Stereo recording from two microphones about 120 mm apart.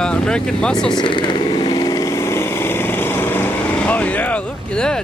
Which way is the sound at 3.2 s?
15° left (ahead or behind).